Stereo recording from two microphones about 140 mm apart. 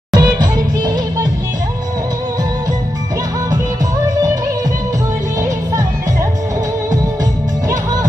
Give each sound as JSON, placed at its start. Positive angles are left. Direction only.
{"t": 0.1, "sound": "music", "side_deg": -30}